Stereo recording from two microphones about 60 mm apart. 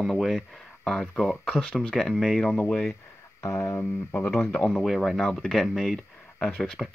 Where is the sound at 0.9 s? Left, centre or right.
Centre.